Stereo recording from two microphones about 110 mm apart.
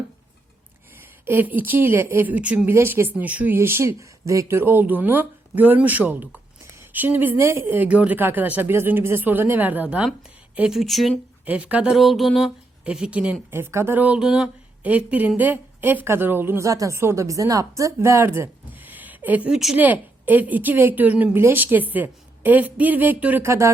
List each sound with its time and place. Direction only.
1.2 s speech: 20° right (ahead or behind)
10.8 s speech: centre (ahead or behind)
11.4 s speech: 15° right (ahead or behind)
13.5 s a woman's voice: 20° right (ahead or behind)
16.6 s speech: 30° right (ahead or behind); by 19.4 s 15° right (ahead or behind)
19.5 s speech: 5° right (ahead or behind)
19.7 s speech: 15° right (ahead or behind)
23.5 s a woman's voice: 25° right (ahead or behind)